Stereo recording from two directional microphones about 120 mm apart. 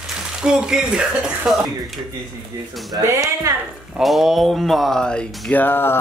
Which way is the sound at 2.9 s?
30° right (ahead or behind).